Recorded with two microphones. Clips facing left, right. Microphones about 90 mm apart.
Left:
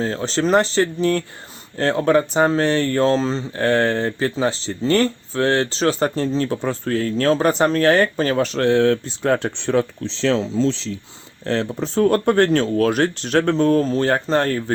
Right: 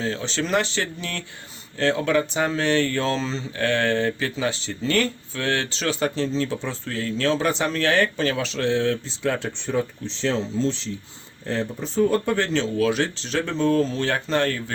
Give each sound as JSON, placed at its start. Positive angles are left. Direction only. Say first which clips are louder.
{"t": 0.0, "sound": "speech", "louder": "left 6 dB", "side_deg": 40}
{"t": 9.6, "sound": "speech", "louder": "left 6 dB", "side_deg": 80}
{"t": 11.4, "sound": "speech", "louder": "left 5 dB", "side_deg": 85}